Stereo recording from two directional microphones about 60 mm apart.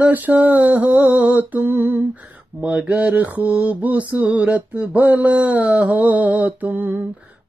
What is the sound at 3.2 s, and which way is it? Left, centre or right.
Mantra, right.